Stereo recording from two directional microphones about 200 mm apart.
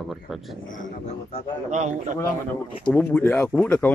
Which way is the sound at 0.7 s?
40° left (ahead or behind).